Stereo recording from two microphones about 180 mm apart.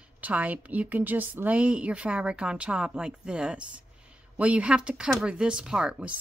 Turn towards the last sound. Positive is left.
turn(degrees=-5)  # may be behind; listen again after turning